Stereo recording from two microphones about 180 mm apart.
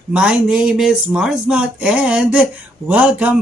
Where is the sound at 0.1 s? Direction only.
5° right (ahead or behind).